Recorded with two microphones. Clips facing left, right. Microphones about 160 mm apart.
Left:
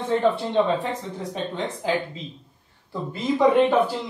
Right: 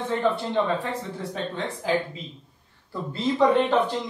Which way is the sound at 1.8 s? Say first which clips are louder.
Right 1 dB; 20° left (ahead or behind).